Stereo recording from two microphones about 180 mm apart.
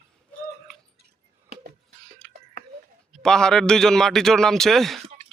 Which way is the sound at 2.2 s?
5° left (ahead or behind).